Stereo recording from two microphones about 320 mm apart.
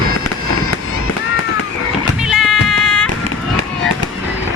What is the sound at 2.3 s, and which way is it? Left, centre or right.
Music, centre.